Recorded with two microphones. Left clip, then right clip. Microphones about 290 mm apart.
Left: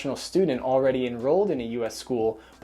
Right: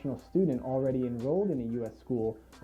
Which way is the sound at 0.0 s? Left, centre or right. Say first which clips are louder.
Left 6 dB; centre.